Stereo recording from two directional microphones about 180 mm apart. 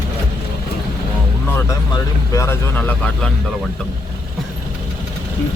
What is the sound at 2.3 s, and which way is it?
Speech, 15° left (ahead or behind).